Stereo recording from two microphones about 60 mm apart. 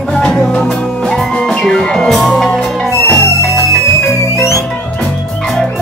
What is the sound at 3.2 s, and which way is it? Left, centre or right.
Music, left.